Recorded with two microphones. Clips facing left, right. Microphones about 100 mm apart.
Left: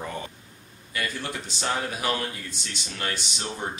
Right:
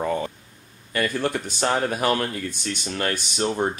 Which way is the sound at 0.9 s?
50° right (ahead or behind).